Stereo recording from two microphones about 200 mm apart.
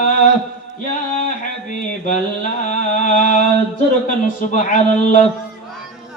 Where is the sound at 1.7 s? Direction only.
40° left (ahead or behind).